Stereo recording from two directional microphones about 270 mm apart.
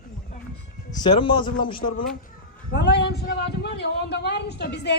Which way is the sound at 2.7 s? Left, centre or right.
Left.